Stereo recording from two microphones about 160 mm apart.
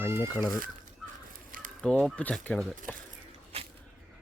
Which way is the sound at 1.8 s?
5° left (ahead or behind).